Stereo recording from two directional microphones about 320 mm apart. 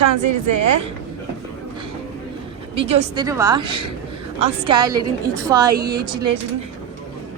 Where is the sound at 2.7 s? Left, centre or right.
Centre.